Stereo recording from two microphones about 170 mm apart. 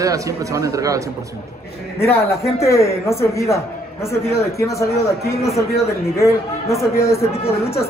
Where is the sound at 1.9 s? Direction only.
15° left (ahead or behind).